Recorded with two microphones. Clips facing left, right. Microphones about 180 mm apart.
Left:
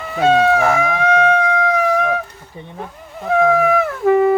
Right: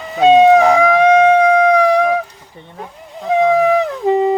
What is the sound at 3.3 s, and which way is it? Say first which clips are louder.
Music: right 2 dB; 15° right (ahead or behind).